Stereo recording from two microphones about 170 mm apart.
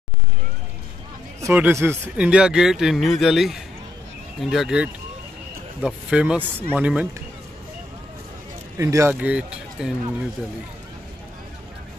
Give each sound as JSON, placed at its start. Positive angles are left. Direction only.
{"t": 1.4, "sound": "a man's voice", "side_deg": -15}
{"t": 8.7, "sound": "speech", "side_deg": -15}